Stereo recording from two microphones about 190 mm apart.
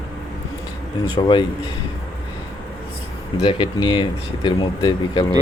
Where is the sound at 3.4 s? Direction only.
25° left (ahead or behind).